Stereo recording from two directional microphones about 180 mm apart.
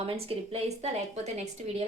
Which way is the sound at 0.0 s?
35° right (ahead or behind).